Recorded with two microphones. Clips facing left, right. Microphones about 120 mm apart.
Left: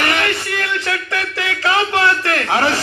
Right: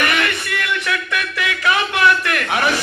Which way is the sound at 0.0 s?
30° left (ahead or behind).